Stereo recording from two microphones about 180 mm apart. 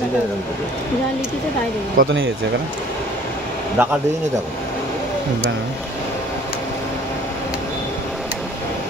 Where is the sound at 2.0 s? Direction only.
50° right (ahead or behind).